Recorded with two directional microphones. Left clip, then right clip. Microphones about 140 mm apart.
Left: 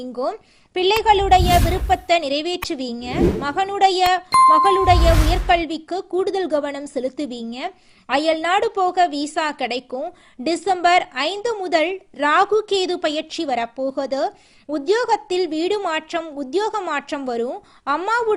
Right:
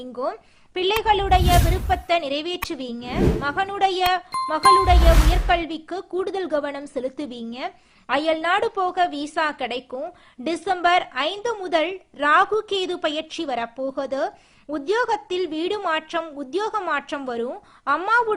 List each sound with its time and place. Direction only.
0.0 s a woman's voice: 30° left (ahead or behind)
3.2 s speech: centre (ahead or behind)
3.4 s a woman's voice: 30° left (ahead or behind)